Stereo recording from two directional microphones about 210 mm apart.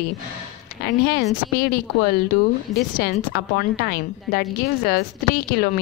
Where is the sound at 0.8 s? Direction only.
45° left (ahead or behind).